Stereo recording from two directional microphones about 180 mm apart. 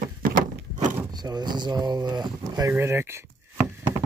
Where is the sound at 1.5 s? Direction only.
25° right (ahead or behind).